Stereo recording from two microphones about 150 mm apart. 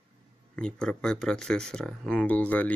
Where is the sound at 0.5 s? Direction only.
5° left (ahead or behind).